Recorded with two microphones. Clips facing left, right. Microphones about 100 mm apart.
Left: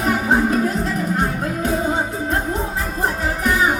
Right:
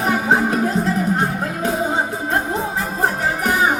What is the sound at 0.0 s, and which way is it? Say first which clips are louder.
Music: even; 25° right (ahead or behind).